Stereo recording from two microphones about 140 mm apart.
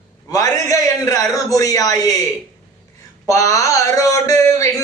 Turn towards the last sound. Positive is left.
turn(degrees=20)  # may be behind; listen again after turning